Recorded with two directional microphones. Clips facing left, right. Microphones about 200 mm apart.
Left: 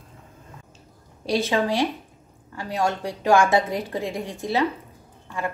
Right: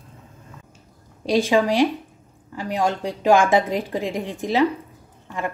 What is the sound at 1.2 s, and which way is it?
A woman's voice, 15° right (ahead or behind).